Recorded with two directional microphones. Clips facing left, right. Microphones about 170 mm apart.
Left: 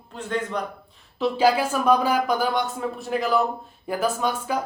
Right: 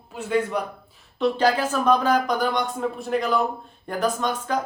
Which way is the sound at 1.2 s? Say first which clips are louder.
Left 1 dB; 10° left (ahead or behind).